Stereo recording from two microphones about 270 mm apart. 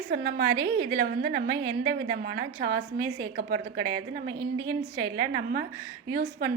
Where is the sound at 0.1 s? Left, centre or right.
Right.